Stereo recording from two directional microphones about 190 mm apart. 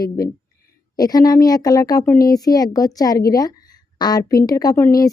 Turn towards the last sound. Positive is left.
turn(degrees=15)  # may be behind; listen again after turning